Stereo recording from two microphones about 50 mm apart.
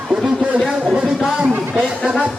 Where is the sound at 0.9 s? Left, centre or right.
Centre.